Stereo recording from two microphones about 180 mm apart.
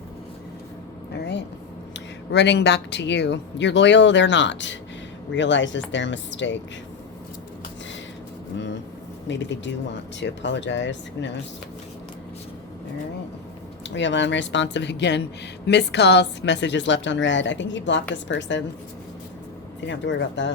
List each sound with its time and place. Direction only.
1.1 s speech: 70° left (ahead or behind); by 6.6 s 90° left
9.2 s speech: 85° left
13.8 s speech: 90° left
19.8 s speech: 80° left